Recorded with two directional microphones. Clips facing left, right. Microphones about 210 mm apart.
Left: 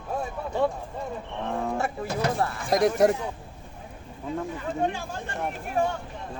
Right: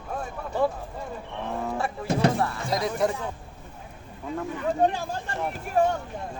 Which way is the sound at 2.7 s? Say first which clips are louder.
Left 7 dB; 50° left (ahead or behind).